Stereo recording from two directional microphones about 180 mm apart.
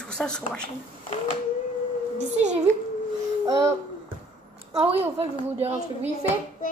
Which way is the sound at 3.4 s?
20° right (ahead or behind).